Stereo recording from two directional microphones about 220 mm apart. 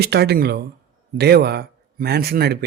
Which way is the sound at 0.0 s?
45° right (ahead or behind).